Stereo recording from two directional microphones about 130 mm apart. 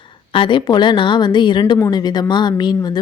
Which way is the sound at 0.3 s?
40° left (ahead or behind).